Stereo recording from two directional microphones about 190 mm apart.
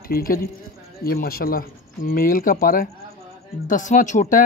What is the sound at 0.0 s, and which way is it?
A woman's voice, 50° left (ahead or behind).